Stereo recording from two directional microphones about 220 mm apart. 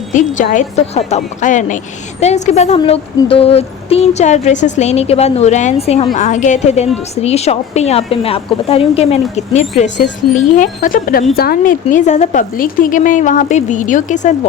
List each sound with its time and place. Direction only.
0.1 s a woman's voice: 35° left (ahead or behind)